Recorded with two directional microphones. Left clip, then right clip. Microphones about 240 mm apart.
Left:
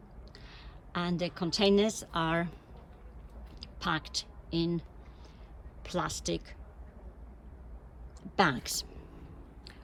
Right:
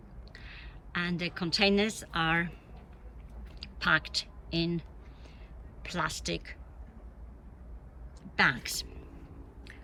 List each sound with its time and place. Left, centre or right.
0.3 s a woman's voice: centre
3.6 s speech: centre
8.4 s speech: centre